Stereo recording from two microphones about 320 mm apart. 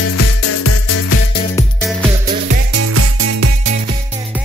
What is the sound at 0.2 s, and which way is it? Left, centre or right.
Music, left.